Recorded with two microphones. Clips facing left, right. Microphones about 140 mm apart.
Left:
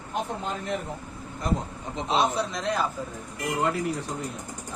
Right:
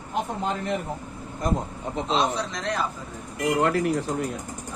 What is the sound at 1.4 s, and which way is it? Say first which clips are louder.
Speech: right 2 dB; 45° right (ahead or behind).